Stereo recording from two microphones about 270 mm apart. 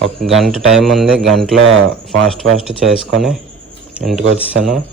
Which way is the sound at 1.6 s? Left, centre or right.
Right.